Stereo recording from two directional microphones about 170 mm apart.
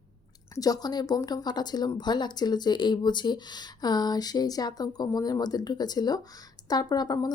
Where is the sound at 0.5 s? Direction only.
20° left (ahead or behind).